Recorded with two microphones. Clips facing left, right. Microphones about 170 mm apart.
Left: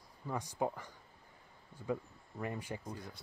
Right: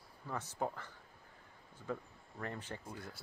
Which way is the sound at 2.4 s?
10° left (ahead or behind).